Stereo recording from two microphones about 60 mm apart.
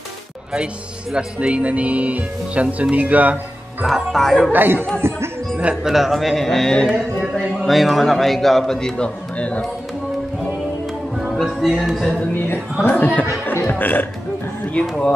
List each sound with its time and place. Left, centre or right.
1.1 s speech: centre
3.8 s a man's voice: centre
4.5 s speech: right
5.0 s music: right
5.9 s a man's voice: centre
11.4 s a man's voice: centre
12.9 s speech: left
14.7 s speech: centre